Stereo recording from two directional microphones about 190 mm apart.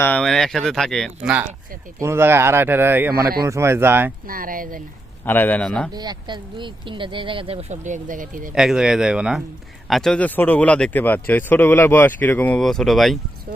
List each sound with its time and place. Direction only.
0.0 s speech: 5° left (ahead or behind); by 4.1 s 10° right (ahead or behind)
4.3 s speech: 45° right (ahead or behind)
5.2 s speech: 10° left (ahead or behind)
5.9 s speech: 20° right (ahead or behind); by 8.5 s 45° right (ahead or behind)
8.5 s speech: 5° right (ahead or behind)